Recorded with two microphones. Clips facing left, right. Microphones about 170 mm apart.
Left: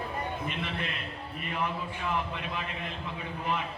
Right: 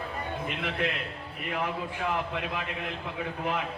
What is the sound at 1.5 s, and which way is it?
Speech, 90° right.